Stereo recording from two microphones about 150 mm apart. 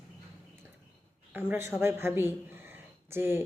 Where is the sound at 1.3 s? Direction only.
15° right (ahead or behind).